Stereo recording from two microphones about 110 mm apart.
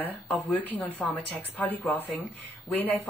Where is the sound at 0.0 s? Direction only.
15° left (ahead or behind).